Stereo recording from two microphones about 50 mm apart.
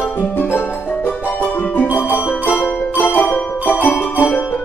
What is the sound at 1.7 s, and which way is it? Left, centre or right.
Music, left.